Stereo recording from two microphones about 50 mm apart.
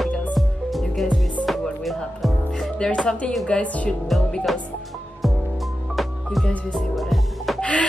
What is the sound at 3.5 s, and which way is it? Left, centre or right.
Speech, left.